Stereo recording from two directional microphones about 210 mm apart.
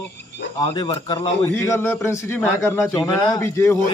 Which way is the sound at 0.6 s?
20° left (ahead or behind).